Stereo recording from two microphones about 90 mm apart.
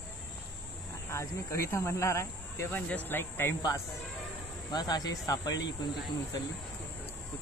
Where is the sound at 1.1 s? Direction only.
30° left (ahead or behind).